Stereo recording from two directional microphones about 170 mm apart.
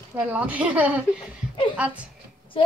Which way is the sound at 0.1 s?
10° right (ahead or behind).